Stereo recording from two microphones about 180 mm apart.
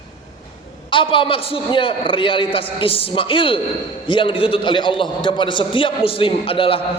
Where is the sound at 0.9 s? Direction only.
30° left (ahead or behind).